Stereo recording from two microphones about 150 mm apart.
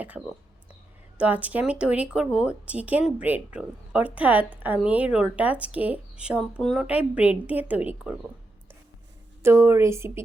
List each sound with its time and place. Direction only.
1.2 s speech: 10° right (ahead or behind)
9.4 s speech: 15° right (ahead or behind)